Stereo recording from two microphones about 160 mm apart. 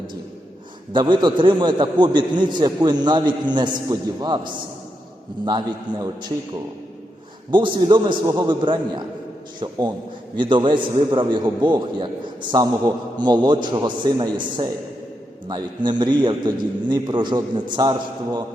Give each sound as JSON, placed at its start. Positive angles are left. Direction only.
{"t": 0.9, "sound": "a man's voice", "side_deg": -30}
{"t": 7.5, "sound": "a man's voice", "side_deg": -30}